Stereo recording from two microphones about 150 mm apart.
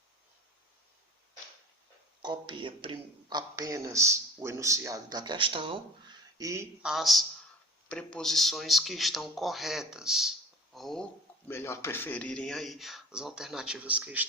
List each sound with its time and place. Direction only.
2.2 s speech: 30° right (ahead or behind)
6.8 s speech: centre (ahead or behind)
11.4 s speech: 15° left (ahead or behind); by 14.3 s 10° right (ahead or behind)